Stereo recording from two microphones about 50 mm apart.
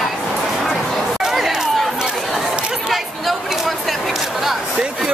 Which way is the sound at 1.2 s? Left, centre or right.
Centre.